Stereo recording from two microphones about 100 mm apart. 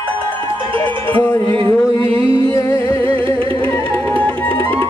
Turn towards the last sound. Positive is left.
turn(degrees=20)  # may be behind; listen again after turning